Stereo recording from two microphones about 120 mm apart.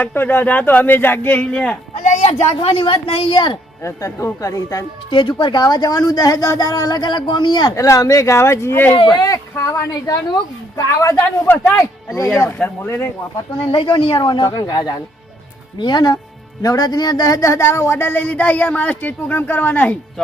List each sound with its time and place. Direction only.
0.0 s speech: 15° left (ahead or behind)
2.0 s a sound: 90° left
2.6 s a woman's voice: 50° left (ahead or behind)
3.8 s a man's voice: 25° left (ahead or behind)
5.1 s a woman's voice: 40° left (ahead or behind)
7.8 s a man's voice: 25° left (ahead or behind)
9.1 s a man's voice: 30° left (ahead or behind)
13.7 s a woman's voice: 45° left (ahead or behind); by 20.2 s 15° left (ahead or behind)